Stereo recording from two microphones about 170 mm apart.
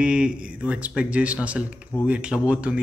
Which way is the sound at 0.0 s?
5° right (ahead or behind).